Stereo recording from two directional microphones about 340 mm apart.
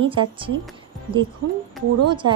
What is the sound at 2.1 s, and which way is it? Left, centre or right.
Speech, centre.